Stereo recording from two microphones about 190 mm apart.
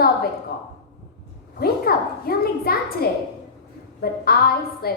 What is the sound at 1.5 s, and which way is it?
A woman's voice, 55° left (ahead or behind).